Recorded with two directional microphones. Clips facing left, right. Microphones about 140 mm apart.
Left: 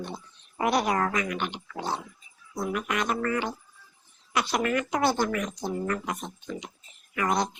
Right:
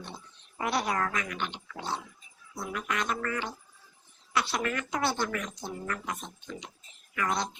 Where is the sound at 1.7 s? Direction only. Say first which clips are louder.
Left 4 dB; 50° left (ahead or behind).